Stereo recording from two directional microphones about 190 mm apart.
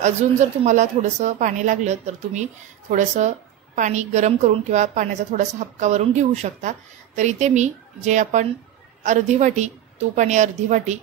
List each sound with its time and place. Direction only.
0.0 s a woman's voice: 40° right (ahead or behind)